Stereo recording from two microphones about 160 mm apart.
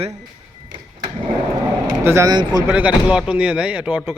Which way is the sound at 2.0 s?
15° right (ahead or behind).